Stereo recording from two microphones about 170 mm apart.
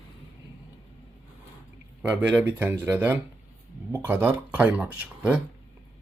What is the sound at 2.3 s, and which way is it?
Speech, 10° right (ahead or behind).